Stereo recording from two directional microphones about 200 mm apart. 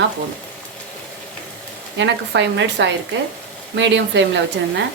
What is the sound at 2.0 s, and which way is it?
A woman's voice, 60° right (ahead or behind).